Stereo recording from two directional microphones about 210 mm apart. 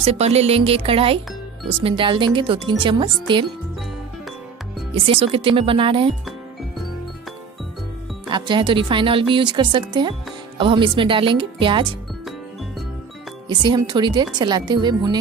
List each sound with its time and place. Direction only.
0.0 s a woman's voice: 30° right (ahead or behind)
5.0 s a woman's voice: 25° right (ahead or behind)
8.3 s a woman's voice: 20° right (ahead or behind)
13.5 s a woman's voice: 20° right (ahead or behind)